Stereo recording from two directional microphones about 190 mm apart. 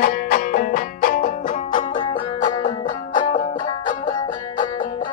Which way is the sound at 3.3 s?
45° left (ahead or behind).